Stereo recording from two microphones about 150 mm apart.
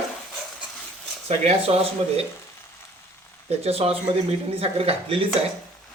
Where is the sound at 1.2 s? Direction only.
45° right (ahead or behind).